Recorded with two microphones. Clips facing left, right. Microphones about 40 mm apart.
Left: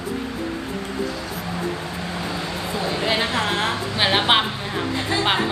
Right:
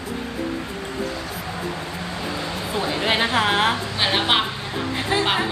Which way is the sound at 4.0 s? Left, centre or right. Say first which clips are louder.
Left 3 dB; centre.